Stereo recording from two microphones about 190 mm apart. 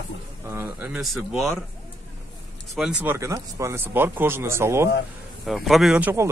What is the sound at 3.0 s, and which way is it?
Speech, 15° right (ahead or behind).